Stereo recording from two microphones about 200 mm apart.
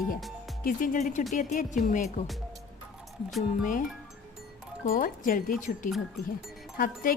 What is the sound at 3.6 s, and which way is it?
Speech, 40° left (ahead or behind).